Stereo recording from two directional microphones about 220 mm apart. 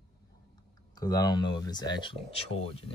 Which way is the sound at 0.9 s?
15° left (ahead or behind).